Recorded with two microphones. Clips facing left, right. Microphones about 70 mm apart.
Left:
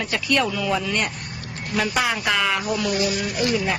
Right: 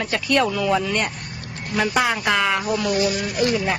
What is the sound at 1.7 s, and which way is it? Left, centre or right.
Speech, centre.